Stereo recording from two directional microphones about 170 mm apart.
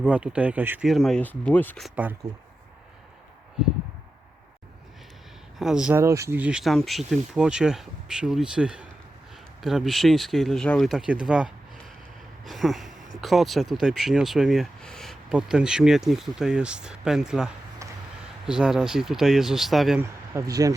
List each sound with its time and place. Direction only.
0.0 s speech: 5° right (ahead or behind)
0.9 s speech: centre (ahead or behind)
5.5 s speech: 5° right (ahead or behind)
6.0 s speech: 15° right (ahead or behind); by 20.0 s centre (ahead or behind)
20.0 s speech: 20° right (ahead or behind)